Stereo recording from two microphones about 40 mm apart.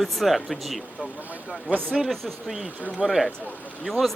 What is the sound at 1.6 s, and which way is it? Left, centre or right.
Speech, right.